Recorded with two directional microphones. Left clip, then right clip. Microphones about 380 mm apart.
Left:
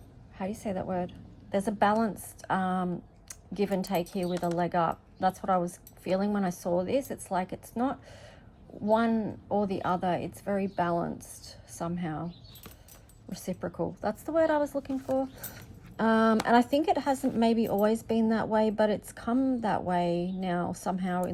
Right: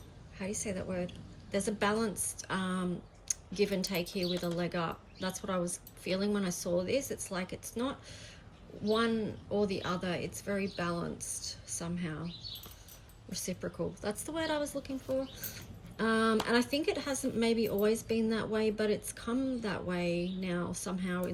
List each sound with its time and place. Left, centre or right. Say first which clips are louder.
0.6 s speech: left 6 dB; left
6.7 s speech: left 2 dB; left
11.2 s a woman's voice: right 6 dB; centre
11.8 s speech: left 9 dB; left
13.3 s speech: left 3 dB; left